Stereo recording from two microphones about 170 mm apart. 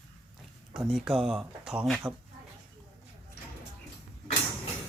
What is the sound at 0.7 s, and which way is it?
Speech, centre (ahead or behind).